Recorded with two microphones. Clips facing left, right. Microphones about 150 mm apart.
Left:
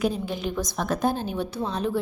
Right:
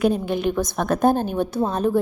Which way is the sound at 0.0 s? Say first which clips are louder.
Right 6 dB; 60° right (ahead or behind).